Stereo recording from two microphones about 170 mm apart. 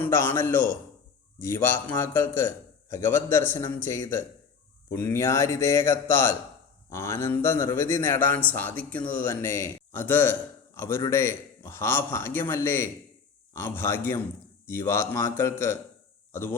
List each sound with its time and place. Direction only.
0.0 s a man's voice: 15° left (ahead or behind)